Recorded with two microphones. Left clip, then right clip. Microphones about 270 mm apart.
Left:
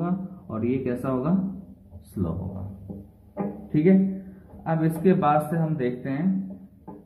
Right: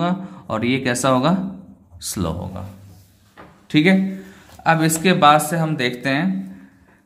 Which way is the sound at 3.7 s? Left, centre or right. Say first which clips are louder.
Right 6 dB; right.